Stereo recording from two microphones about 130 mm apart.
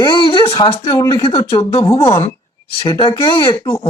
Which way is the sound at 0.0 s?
35° left (ahead or behind).